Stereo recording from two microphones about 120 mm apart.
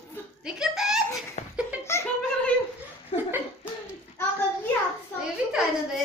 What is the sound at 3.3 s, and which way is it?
Cough, 20° right (ahead or behind).